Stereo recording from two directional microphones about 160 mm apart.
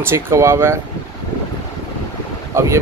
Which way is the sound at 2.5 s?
20° right (ahead or behind).